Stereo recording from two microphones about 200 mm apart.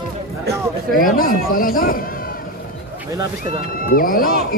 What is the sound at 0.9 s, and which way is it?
A man's voice, 45° left (ahead or behind).